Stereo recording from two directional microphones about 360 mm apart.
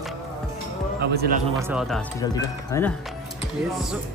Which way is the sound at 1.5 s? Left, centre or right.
Centre.